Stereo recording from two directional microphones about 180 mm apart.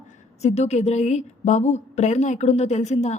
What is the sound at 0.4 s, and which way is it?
A woman's voice, 40° left (ahead or behind).